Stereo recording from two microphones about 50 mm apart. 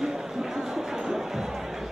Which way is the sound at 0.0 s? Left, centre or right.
Centre.